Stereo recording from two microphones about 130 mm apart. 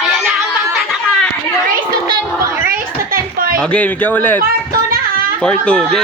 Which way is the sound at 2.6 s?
90° right.